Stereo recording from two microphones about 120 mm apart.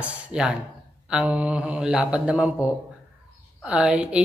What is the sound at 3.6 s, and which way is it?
Speech, 10° right (ahead or behind).